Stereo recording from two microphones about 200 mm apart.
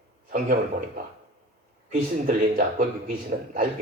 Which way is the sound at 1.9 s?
45° right (ahead or behind).